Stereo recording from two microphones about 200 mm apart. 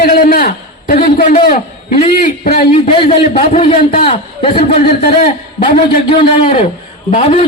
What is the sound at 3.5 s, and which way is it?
Speech, 35° left (ahead or behind).